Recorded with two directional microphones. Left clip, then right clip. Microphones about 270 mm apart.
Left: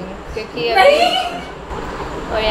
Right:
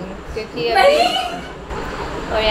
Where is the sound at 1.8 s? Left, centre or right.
Centre.